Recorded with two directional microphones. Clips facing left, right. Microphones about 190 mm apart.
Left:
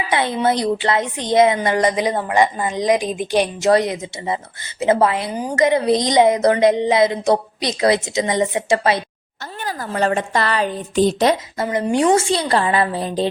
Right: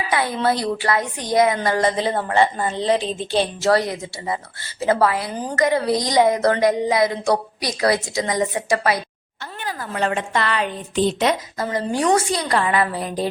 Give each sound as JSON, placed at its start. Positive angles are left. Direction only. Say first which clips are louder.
{"t": 0.1, "sound": "a woman's voice", "louder": "left 2 dB", "side_deg": 25}
{"t": 9.6, "sound": "a woman's voice", "louder": "left 3 dB", "side_deg": 40}